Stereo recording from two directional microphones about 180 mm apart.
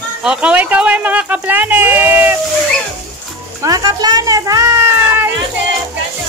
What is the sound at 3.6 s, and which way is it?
Music, 20° right (ahead or behind).